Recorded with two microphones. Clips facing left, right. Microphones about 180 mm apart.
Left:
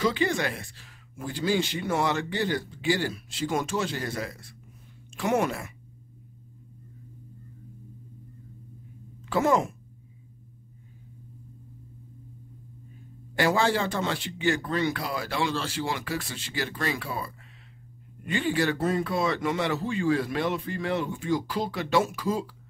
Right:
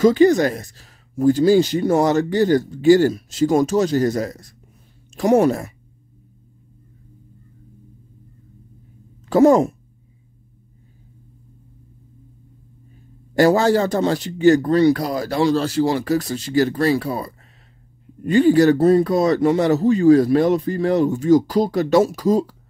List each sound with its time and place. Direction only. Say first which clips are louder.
0.0 s speech: right 13 dB; 40° right (ahead or behind)
9.2 s speech: right 11 dB; 40° right (ahead or behind)
13.3 s speech: right 9 dB; 40° right (ahead or behind)